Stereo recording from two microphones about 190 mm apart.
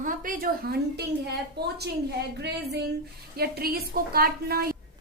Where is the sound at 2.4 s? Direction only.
60° right (ahead or behind).